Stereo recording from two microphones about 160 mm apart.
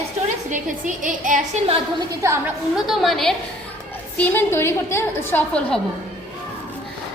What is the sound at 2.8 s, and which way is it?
A woman's voice, centre (ahead or behind).